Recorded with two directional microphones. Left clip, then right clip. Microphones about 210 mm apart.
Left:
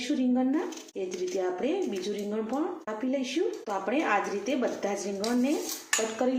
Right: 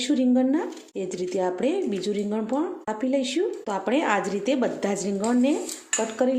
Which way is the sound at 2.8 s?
50° right (ahead or behind).